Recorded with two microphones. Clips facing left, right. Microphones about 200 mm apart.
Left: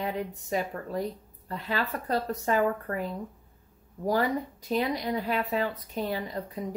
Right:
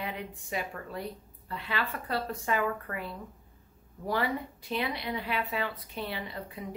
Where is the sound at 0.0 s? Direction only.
40° left (ahead or behind).